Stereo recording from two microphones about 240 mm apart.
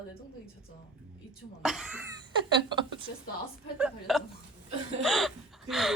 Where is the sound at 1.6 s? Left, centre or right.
Centre.